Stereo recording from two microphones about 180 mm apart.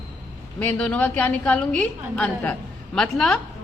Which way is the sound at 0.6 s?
5° left (ahead or behind).